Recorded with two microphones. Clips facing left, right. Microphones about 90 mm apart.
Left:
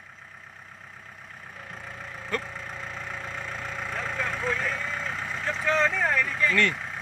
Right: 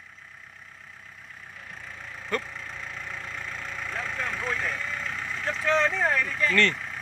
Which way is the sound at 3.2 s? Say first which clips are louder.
Left 2 dB; 20° left (ahead or behind).